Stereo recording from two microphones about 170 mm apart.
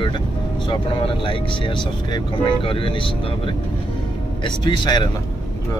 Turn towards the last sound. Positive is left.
turn(degrees=25)  # may be behind; listen again after turning